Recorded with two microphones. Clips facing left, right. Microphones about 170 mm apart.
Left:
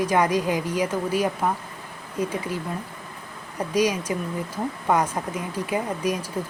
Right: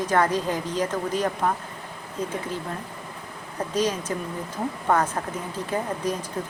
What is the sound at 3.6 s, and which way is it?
A woman's voice, 10° left (ahead or behind).